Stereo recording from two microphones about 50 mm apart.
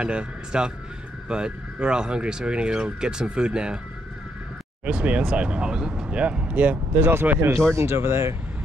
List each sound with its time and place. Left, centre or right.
0.0 s a man's voice: right
4.8 s speech: right
7.7 s speech: right